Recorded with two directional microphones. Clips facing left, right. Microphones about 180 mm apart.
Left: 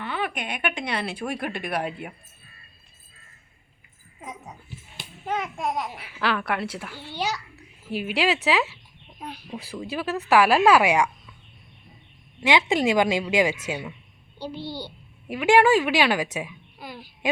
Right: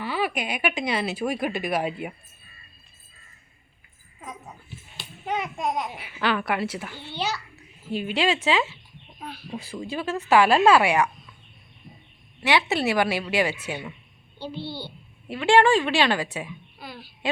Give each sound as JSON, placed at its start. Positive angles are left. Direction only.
{"t": 0.0, "sound": "speech", "side_deg": -5}
{"t": 4.2, "sound": "speech", "side_deg": 20}
{"t": 5.2, "sound": "speech", "side_deg": 0}
{"t": 9.2, "sound": "a woman's voice", "side_deg": 15}
{"t": 9.5, "sound": "speech", "side_deg": 0}
{"t": 12.4, "sound": "a woman's voice", "side_deg": 15}